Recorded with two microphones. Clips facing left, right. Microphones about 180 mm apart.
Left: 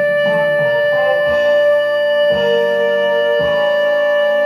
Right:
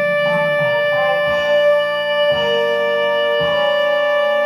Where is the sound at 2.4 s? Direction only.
30° left (ahead or behind).